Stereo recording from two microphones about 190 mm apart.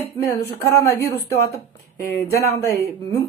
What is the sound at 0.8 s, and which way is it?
Speech, 15° left (ahead or behind).